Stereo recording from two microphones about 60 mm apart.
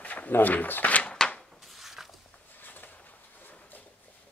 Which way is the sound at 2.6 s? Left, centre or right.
Left.